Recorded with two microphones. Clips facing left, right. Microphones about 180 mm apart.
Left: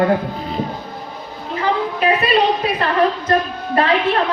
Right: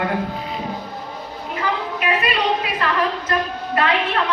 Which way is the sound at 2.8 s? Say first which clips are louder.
Left 4 dB; 30° left (ahead or behind).